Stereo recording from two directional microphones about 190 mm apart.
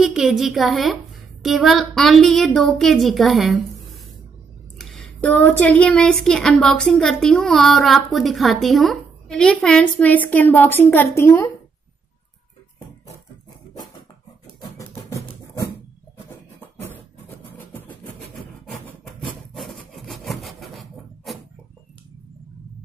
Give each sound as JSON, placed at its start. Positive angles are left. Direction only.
{"t": 0.0, "sound": "speech", "side_deg": 0}
{"t": 4.7, "sound": "speech", "side_deg": 0}
{"t": 12.7, "sound": "music", "side_deg": 15}
{"t": 14.8, "sound": "music", "side_deg": 15}
{"t": 17.6, "sound": "a sound", "side_deg": 10}
{"t": 18.7, "sound": "rub", "side_deg": 0}